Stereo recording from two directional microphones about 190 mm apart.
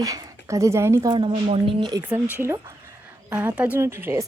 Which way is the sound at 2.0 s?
10° right (ahead or behind).